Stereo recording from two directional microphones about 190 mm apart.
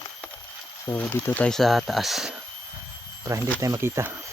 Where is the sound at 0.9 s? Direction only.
10° left (ahead or behind).